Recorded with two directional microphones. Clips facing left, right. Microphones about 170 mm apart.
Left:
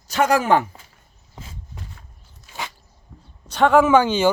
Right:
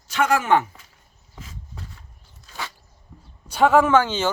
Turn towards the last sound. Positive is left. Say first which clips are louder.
# left 3 dB
turn(degrees=15)  # may be behind; listen again after turning